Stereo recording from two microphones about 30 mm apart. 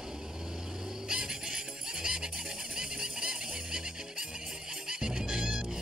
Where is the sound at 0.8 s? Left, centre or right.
Right.